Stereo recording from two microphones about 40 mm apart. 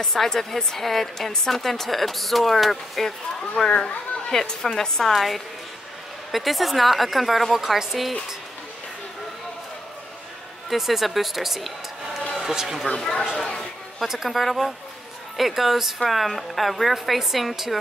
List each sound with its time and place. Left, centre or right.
0.0 s a woman's voice: centre
3.7 s a child's voice: left
4.3 s a woman's voice: centre
5.1 s a woman's voice: centre
10.7 s a man's voice: centre
12.8 s a woman's voice: centre
14.0 s a woman's voice: centre